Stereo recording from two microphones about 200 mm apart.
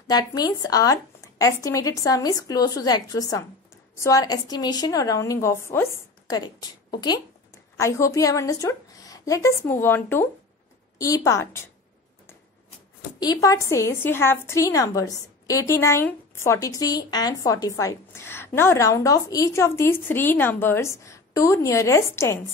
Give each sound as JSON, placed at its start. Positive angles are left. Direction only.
{"t": 0.0, "sound": "a woman's voice", "side_deg": 20}
{"t": 7.8, "sound": "a woman's voice", "side_deg": 15}
{"t": 13.2, "sound": "a woman's voice", "side_deg": 20}